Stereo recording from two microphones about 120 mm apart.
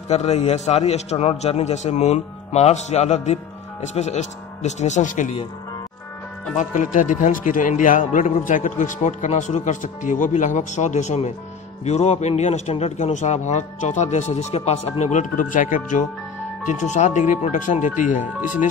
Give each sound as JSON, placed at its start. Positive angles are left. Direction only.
{"t": 0.1, "sound": "a man's voice", "side_deg": 65}
{"t": 6.5, "sound": "a man's voice", "side_deg": 90}